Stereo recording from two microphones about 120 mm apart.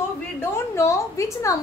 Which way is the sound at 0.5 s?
25° left (ahead or behind).